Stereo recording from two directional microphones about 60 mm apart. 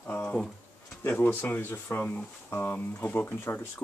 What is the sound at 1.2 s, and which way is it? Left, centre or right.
Speech, left.